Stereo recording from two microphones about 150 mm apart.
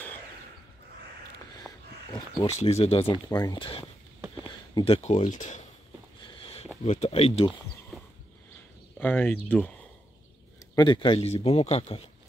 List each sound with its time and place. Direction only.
1.6 s dog: centre (ahead or behind)
2.4 s speech: 45° left (ahead or behind)
3.3 s speech: 25° left (ahead or behind); by 5.6 s 55° left (ahead or behind)
6.2 s a sound: 35° left (ahead or behind)
6.8 s speech: 45° left (ahead or behind)
9.0 s speech: 10° left (ahead or behind)
10.8 s speech: 30° left (ahead or behind)